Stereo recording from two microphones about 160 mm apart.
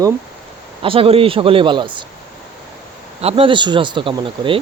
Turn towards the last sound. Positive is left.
turn(degrees=-35)  # may be behind; listen again after turning